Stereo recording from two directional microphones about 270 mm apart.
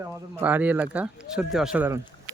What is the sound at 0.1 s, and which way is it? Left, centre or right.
Speech, centre.